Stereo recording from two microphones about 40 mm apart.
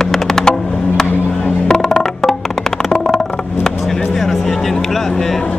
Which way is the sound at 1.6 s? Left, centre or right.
Centre.